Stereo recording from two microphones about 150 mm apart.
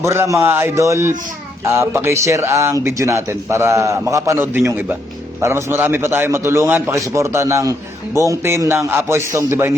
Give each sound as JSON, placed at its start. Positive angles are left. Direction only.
{"t": 0.0, "sound": "a man's voice", "side_deg": -20}